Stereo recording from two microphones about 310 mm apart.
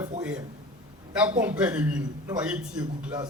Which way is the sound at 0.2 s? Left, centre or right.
Centre.